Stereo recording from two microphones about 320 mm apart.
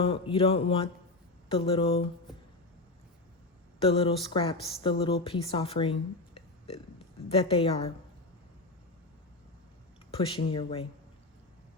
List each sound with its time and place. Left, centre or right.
0.0 s speech: centre
3.8 s speech: centre
10.2 s speech: centre